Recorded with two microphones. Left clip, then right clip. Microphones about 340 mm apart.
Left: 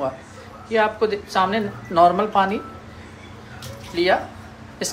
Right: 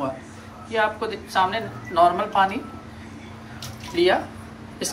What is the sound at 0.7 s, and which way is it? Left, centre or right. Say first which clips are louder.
A woman's voice: left 4 dB; centre.